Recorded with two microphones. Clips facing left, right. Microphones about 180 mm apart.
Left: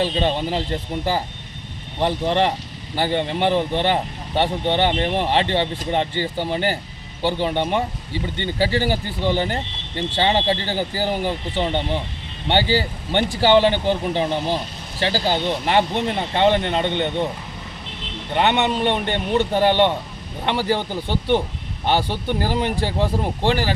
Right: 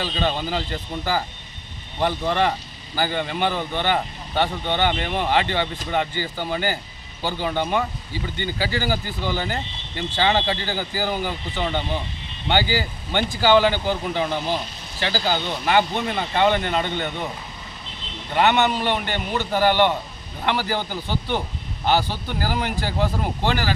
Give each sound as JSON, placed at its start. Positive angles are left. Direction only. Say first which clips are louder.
{"t": 0.0, "sound": "speech", "louder": "left 4 dB", "side_deg": 30}
{"t": 18.3, "sound": "speech", "louder": "even", "side_deg": 25}